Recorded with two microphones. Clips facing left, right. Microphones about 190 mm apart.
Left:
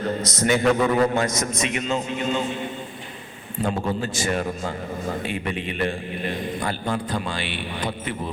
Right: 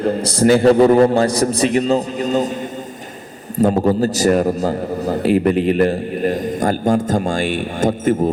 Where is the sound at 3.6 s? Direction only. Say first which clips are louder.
Right 10 dB; 40° right (ahead or behind).